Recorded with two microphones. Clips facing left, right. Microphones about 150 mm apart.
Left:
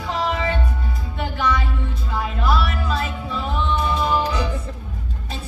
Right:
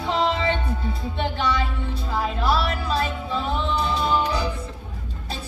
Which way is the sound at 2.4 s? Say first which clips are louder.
Left 2 dB; 35° right (ahead or behind).